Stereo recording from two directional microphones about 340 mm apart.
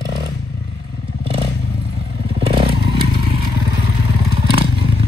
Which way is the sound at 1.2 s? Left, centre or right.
Centre.